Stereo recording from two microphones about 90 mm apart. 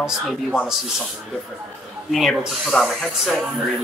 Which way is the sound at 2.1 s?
Centre (ahead or behind).